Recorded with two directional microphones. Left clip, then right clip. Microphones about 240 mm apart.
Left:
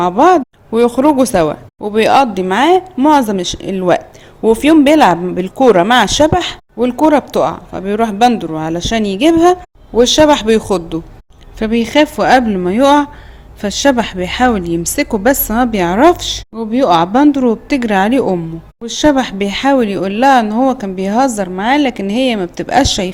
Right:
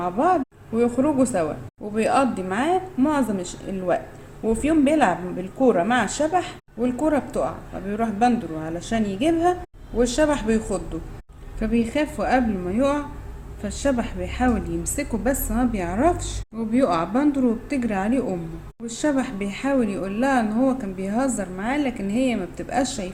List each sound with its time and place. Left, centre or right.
0.0 s speech: left